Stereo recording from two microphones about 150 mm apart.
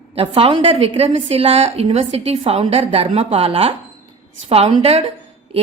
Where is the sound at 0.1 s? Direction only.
40° right (ahead or behind).